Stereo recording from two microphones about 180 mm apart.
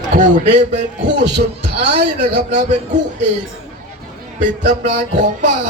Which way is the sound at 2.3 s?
45° right (ahead or behind).